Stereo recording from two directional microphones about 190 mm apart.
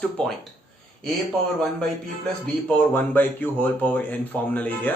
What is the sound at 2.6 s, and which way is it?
A man's voice, 10° left (ahead or behind).